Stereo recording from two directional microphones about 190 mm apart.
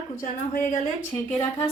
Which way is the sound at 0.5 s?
50° left (ahead or behind).